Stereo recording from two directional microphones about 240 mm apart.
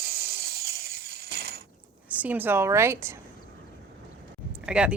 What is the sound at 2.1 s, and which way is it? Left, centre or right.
A woman's voice, centre.